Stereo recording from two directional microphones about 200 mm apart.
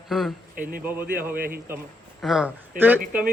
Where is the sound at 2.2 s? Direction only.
5° right (ahead or behind).